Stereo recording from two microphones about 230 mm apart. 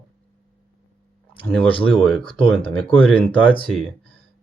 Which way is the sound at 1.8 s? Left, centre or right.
Centre.